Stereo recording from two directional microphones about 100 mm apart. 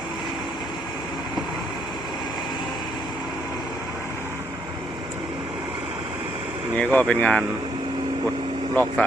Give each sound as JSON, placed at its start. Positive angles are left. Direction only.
{"t": 6.7, "sound": "speech", "side_deg": 10}
{"t": 8.7, "sound": "speech", "side_deg": 15}